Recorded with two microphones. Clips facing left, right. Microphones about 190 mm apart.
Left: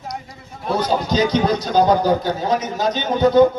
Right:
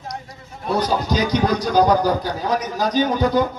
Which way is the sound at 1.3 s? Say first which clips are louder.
Left 1 dB; 25° left (ahead or behind).